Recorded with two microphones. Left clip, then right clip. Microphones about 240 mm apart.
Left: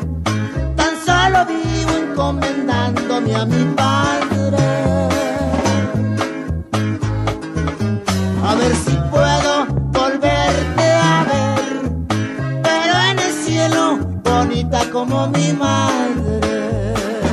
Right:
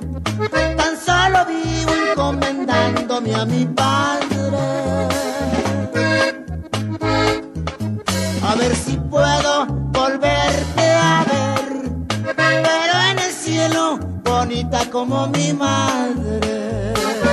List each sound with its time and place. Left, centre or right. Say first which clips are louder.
0.6 s music: right 3 dB; right
2.0 s music: right 1 dB; right
8.5 s music: left 2 dB; right
9.1 s music: left 1 dB; right
12.4 s music: right 4 dB; right